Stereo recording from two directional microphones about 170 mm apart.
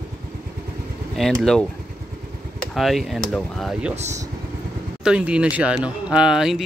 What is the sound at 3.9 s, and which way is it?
Speech, 40° right (ahead or behind).